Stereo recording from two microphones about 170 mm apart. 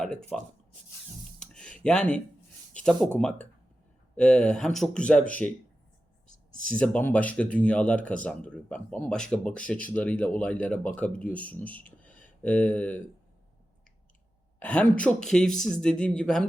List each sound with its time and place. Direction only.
0.0 s speech: 5° left (ahead or behind)
1.4 s a sound: 5° left (ahead or behind)
2.8 s speech: 5° left (ahead or behind)
6.7 s speech: 10° left (ahead or behind)
14.6 s speech: 5° left (ahead or behind)